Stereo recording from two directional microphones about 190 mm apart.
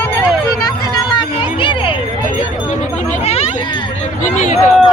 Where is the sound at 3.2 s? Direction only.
35° left (ahead or behind).